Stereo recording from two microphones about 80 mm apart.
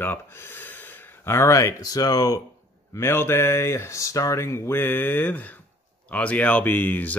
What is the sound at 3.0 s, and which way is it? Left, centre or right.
Speech, left.